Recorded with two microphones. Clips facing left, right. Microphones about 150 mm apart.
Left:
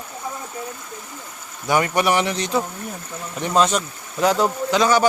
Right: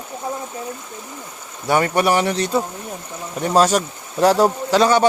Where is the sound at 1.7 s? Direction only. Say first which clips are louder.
Right 2 dB; 35° right (ahead or behind).